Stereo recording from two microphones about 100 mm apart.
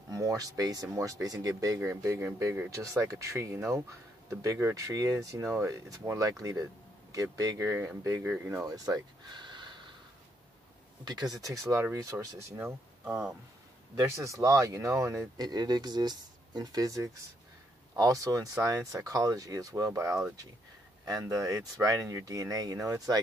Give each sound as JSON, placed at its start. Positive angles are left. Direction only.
{"t": 0.1, "sound": "speech", "side_deg": -35}
{"t": 8.6, "sound": "a sound", "side_deg": -35}
{"t": 11.1, "sound": "speech", "side_deg": -40}
{"t": 12.5, "sound": "speech", "side_deg": -15}
{"t": 14.0, "sound": "speech", "side_deg": -30}
{"t": 15.4, "sound": "speech", "side_deg": -45}